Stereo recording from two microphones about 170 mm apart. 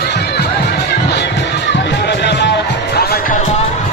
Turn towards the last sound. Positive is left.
turn(degrees=65)  # may be behind; listen again after turning